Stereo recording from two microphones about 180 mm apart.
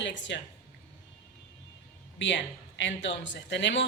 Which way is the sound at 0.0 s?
85° left.